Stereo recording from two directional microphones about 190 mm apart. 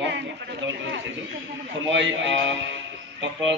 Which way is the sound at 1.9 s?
75° right (ahead or behind).